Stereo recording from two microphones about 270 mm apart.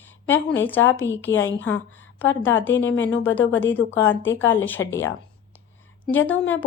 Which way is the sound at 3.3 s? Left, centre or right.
Centre.